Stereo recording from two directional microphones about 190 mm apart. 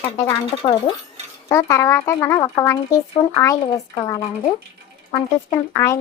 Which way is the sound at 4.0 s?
20° left (ahead or behind).